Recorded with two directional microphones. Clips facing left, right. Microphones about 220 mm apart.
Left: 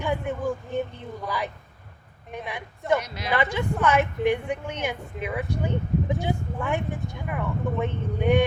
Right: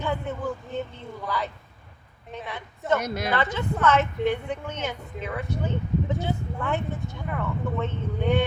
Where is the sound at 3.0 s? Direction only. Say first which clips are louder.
Right 7 dB; 50° right (ahead or behind).